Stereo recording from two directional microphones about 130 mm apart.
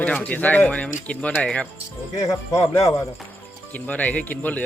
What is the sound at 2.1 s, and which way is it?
Speech, 25° left (ahead or behind).